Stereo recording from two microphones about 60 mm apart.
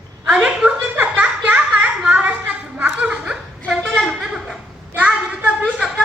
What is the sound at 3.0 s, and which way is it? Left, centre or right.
Chuckle, centre.